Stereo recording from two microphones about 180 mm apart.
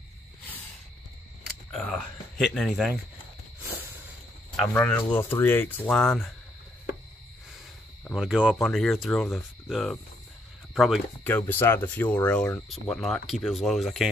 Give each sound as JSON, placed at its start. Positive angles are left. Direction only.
{"t": 1.7, "sound": "speech", "side_deg": 5}
{"t": 4.7, "sound": "speech", "side_deg": 10}
{"t": 8.1, "sound": "speech", "side_deg": -5}
{"t": 11.2, "sound": "speech", "side_deg": 10}